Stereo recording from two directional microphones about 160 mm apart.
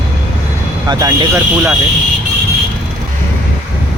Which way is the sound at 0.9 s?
25° right (ahead or behind).